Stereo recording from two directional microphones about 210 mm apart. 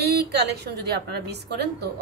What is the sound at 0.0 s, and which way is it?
A woman's voice, 50° right (ahead or behind).